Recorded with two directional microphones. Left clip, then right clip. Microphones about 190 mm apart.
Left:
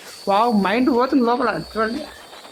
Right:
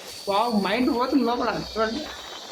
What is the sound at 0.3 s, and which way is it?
Speech, 35° left (ahead or behind).